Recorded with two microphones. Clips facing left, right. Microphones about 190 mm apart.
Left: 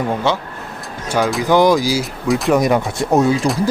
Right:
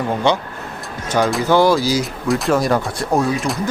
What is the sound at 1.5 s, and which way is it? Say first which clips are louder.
Speech: left 2 dB; 15° left (ahead or behind).